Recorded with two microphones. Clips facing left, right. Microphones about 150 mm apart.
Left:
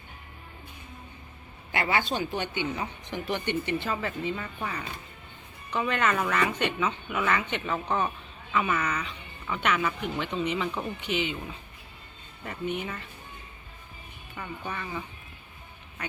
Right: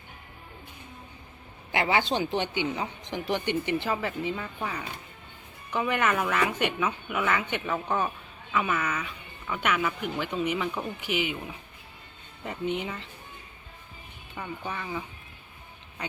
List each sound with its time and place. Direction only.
1.7 s a woman's voice: 15° right (ahead or behind)
14.3 s speech: 10° right (ahead or behind)